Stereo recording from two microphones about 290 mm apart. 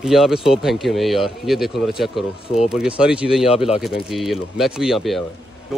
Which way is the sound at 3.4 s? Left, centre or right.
Centre.